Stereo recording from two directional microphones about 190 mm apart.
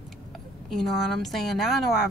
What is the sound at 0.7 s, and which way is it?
A woman's voice, centre (ahead or behind).